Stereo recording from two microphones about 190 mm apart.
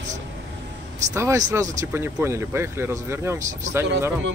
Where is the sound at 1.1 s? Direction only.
15° right (ahead or behind).